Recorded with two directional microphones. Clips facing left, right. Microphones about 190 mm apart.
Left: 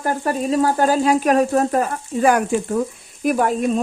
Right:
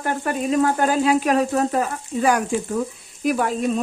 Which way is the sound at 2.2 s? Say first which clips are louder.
Left 3 dB; 55° left (ahead or behind).